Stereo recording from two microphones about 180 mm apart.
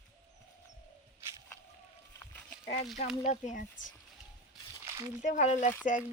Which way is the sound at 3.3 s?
40° left (ahead or behind).